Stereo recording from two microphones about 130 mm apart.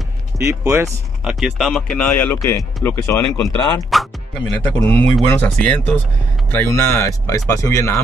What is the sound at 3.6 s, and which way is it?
Speech, 35° left (ahead or behind).